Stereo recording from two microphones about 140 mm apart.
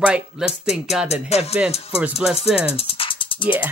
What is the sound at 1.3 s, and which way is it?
Music, 50° left (ahead or behind).